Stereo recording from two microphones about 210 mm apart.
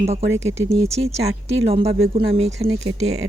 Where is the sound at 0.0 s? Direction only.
30° right (ahead or behind).